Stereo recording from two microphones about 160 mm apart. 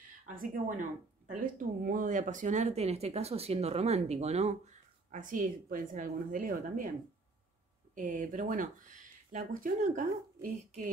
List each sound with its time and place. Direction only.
0.3 s a woman's voice: 60° right (ahead or behind); by 4.6 s 40° right (ahead or behind)
5.1 s a woman's voice: 55° right (ahead or behind)
7.9 s speech: 55° right (ahead or behind)